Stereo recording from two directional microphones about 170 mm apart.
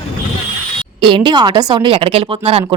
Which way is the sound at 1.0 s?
30° right (ahead or behind).